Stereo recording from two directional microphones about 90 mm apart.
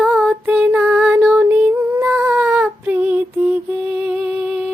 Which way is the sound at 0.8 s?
15° right (ahead or behind).